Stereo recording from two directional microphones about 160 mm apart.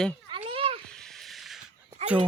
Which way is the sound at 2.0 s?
40° right (ahead or behind).